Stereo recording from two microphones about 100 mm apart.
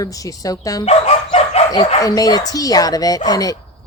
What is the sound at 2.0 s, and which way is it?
Speech, 40° left (ahead or behind).